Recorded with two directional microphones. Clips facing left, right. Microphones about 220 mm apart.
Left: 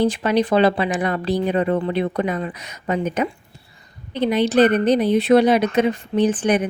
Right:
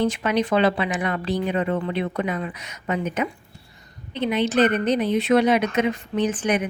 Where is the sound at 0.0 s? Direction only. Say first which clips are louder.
Left 4 dB; 35° left (ahead or behind).